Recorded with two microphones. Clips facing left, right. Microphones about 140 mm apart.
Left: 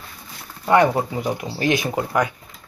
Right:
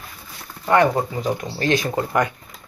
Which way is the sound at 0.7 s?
15° left (ahead or behind).